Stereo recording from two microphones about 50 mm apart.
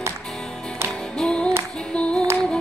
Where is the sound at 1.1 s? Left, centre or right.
Centre.